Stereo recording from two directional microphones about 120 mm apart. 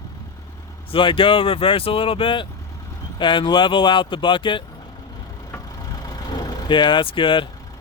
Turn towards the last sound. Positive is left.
turn(degrees=45)  # may be behind; listen again after turning